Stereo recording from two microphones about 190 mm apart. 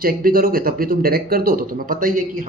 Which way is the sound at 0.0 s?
50° right (ahead or behind).